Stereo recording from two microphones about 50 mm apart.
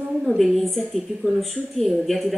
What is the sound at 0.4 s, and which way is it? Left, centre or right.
Speech, centre.